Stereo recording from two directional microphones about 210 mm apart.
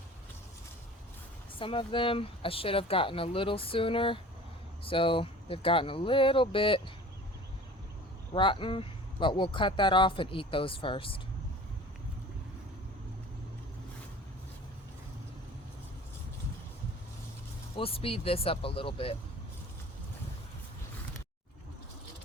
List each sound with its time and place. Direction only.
1.5 s speech: 25° left (ahead or behind)
8.3 s speech: 25° left (ahead or behind)
17.7 s speech: 25° left (ahead or behind)